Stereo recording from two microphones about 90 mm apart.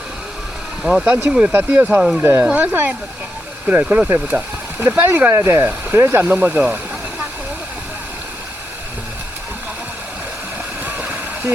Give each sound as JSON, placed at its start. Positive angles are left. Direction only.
{"t": 0.8, "sound": "speech", "side_deg": -5}
{"t": 2.0, "sound": "speech", "side_deg": -5}
{"t": 2.4, "sound": "speech", "side_deg": -15}
{"t": 10.8, "sound": "waterfall", "side_deg": -20}